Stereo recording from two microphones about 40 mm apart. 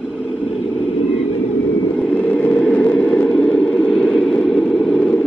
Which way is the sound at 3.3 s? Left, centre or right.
Centre.